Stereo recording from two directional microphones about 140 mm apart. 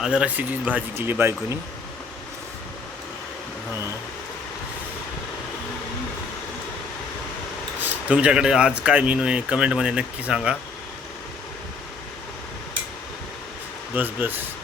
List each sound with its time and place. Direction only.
0.0 s speech: 5° right (ahead or behind)
7.8 s speech: 10° right (ahead or behind)
13.9 s speech: 15° right (ahead or behind)